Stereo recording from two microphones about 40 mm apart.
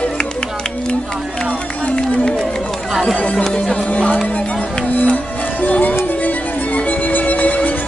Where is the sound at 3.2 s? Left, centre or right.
Left.